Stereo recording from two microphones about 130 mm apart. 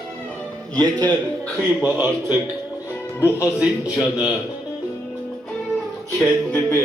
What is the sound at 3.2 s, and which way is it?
Speech, 20° left (ahead or behind).